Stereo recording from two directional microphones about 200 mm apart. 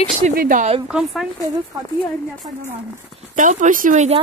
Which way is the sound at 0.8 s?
5° right (ahead or behind).